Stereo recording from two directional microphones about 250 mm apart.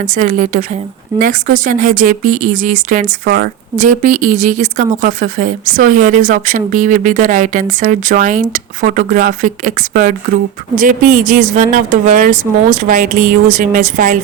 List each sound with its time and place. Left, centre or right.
0.0 s speech: right